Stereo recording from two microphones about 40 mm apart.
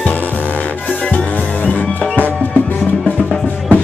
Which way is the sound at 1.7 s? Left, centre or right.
Left.